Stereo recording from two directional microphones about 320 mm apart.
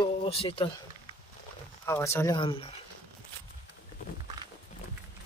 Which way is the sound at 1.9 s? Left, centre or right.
Centre.